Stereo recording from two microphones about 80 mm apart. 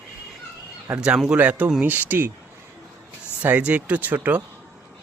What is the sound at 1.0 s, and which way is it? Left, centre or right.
Speech, centre.